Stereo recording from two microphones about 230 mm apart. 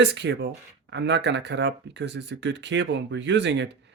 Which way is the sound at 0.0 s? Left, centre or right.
Right.